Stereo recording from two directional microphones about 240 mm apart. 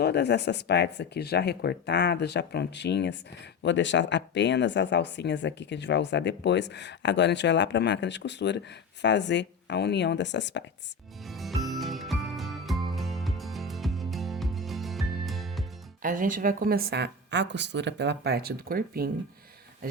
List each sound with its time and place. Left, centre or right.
0.0 s speech: left
11.3 s music: centre
16.0 s a woman's voice: right